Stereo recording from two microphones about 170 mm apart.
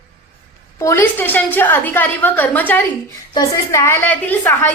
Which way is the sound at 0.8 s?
15° left (ahead or behind).